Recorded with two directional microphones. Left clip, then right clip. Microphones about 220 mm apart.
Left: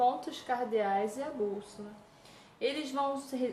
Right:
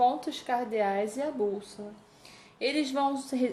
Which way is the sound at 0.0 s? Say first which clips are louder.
Right 3 dB; 35° right (ahead or behind).